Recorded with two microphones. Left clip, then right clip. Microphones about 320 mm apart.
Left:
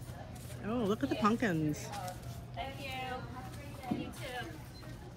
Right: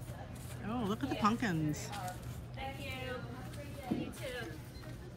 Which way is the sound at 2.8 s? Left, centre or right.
Centre.